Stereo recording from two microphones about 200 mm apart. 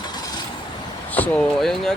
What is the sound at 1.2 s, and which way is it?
Speech, 5° left (ahead or behind).